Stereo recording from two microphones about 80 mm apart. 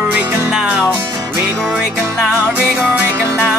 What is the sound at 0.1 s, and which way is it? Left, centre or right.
Music, right.